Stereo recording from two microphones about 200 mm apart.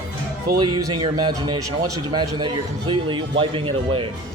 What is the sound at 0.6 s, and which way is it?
A man's voice, 20° right (ahead or behind).